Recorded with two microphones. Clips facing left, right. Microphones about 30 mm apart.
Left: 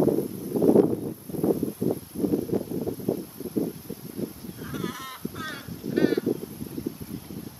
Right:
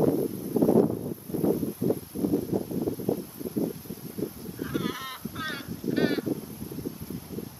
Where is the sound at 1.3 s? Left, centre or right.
Centre.